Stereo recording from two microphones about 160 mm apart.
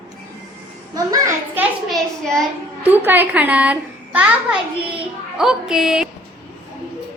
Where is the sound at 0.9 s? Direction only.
20° right (ahead or behind).